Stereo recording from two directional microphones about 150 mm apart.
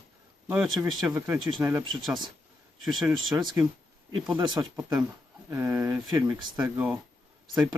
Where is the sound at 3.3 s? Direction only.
20° right (ahead or behind).